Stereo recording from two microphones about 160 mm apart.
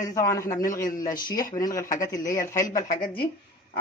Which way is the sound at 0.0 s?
20° left (ahead or behind).